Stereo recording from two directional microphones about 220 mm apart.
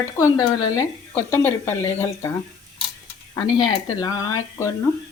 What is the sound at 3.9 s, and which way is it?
Speech, 15° left (ahead or behind).